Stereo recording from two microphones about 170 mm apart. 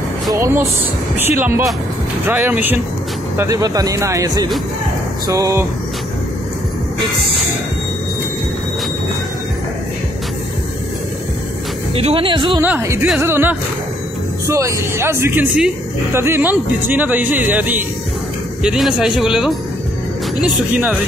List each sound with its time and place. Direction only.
0.3 s speech: 15° right (ahead or behind)
11.9 s speech: 35° right (ahead or behind)
12.6 s speech: 15° right (ahead or behind)